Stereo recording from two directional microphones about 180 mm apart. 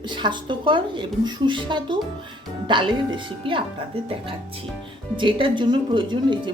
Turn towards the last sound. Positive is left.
turn(degrees=-25)  # may be behind; listen again after turning